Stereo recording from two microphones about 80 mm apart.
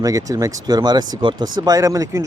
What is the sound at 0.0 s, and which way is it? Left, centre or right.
Speech, right.